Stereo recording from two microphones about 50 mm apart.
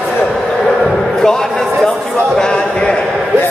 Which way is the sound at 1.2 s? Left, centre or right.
Centre.